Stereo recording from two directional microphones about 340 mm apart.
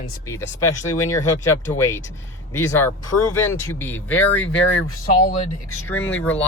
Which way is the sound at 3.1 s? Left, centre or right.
Left.